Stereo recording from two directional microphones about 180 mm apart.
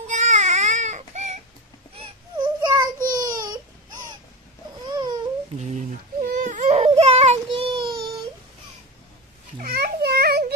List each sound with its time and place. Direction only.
0.0 s baby cry: 40° right (ahead or behind)
2.0 s baby cry: 25° right (ahead or behind)
3.0 s baby cry: 50° right (ahead or behind)
4.9 s babbling: 20° right (ahead or behind)
5.6 s whimper: 40° right (ahead or behind)
6.3 s baby cry: 45° right (ahead or behind); by 7.9 s 30° right (ahead or behind)
9.6 s a sound: 55° right (ahead or behind)